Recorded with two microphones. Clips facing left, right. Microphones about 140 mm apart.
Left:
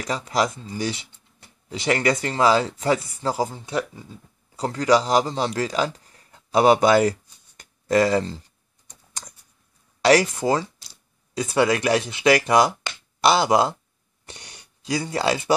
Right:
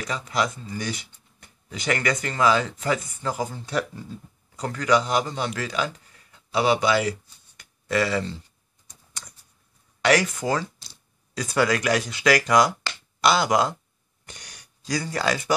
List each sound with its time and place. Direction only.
0.0 s a man's voice: 35° left (ahead or behind)
10.0 s speech: 35° left (ahead or behind)